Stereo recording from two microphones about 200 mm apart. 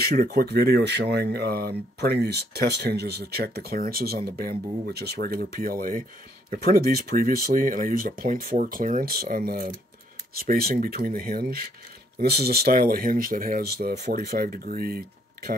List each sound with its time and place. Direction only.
0.0 s speech: 45° right (ahead or behind)